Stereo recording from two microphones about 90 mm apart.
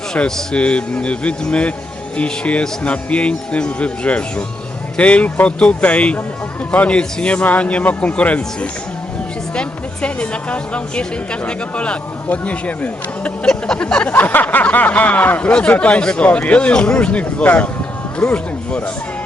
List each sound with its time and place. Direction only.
0.1 s a woman's voice: 5° left (ahead or behind)